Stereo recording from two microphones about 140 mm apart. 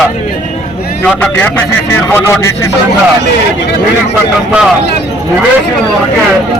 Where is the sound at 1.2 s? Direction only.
15° left (ahead or behind).